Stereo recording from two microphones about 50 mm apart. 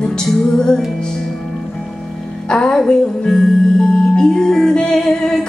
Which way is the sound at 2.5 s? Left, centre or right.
Centre.